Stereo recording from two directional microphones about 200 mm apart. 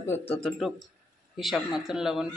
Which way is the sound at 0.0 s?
10° left (ahead or behind).